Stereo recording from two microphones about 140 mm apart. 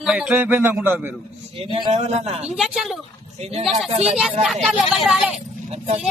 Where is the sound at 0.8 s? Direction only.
15° right (ahead or behind).